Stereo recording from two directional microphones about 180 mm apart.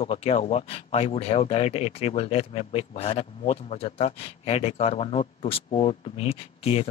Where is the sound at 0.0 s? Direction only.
35° left (ahead or behind).